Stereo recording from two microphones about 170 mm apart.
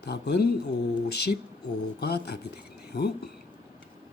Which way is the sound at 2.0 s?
70° left (ahead or behind).